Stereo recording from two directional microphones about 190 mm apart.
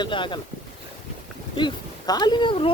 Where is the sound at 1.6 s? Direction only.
25° left (ahead or behind).